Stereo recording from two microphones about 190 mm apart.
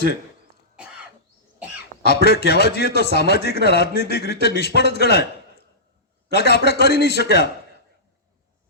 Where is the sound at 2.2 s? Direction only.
60° left (ahead or behind).